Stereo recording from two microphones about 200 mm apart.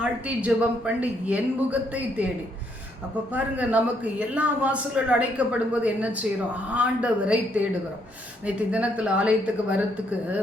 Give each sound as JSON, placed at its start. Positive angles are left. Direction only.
{"t": 0.0, "sound": "a man's voice", "side_deg": -5}
{"t": 3.3, "sound": "a man's voice", "side_deg": -5}